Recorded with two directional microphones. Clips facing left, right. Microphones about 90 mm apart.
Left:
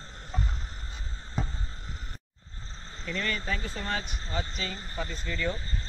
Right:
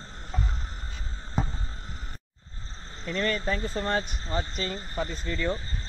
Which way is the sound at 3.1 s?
35° right (ahead or behind).